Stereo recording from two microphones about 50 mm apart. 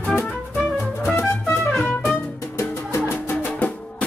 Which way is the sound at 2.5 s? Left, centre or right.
Left.